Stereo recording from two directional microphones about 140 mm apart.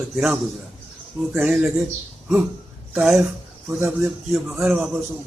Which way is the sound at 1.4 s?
5° right (ahead or behind).